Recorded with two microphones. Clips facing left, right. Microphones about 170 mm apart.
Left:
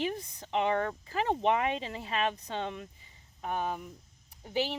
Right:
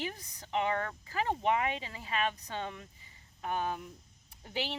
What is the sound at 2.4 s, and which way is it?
Speech, 20° left (ahead or behind).